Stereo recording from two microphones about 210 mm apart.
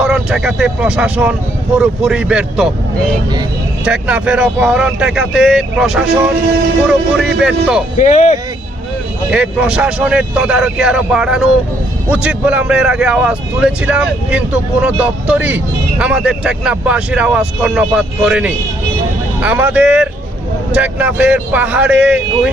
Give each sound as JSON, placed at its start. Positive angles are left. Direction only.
{"t": 0.0, "sound": "a man's voice", "side_deg": 0}
{"t": 3.8, "sound": "a man's voice", "side_deg": -5}
{"t": 7.9, "sound": "speech", "side_deg": 35}
{"t": 9.3, "sound": "a man's voice", "side_deg": -5}